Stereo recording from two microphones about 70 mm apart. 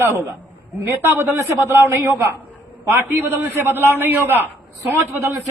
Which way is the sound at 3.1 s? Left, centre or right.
Right.